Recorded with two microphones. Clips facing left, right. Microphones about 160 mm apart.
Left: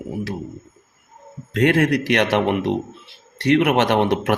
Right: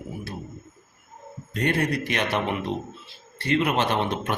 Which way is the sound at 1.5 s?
90° left.